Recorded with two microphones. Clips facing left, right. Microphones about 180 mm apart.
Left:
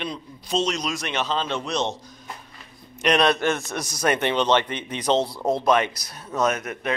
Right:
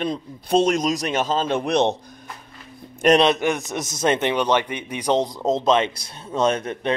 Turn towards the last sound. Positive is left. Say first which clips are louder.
# right 3 dB
turn(degrees=-30)  # may be behind; listen again after turning